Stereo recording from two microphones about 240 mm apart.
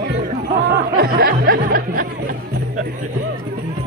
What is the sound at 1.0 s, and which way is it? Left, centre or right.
Music, right.